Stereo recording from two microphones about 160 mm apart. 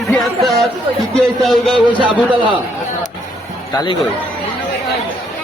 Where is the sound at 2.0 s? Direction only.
30° right (ahead or behind).